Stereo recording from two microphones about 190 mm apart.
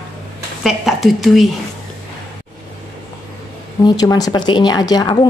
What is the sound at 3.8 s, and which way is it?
A woman's voice, 20° left (ahead or behind).